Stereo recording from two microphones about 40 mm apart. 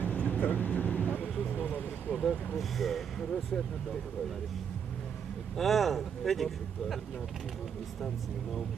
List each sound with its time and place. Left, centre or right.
0.0 s vehicle: left
2.6 s speech: centre
5.5 s speech: centre